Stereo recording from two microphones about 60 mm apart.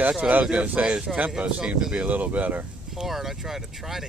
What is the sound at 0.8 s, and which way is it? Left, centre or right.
Speech, centre.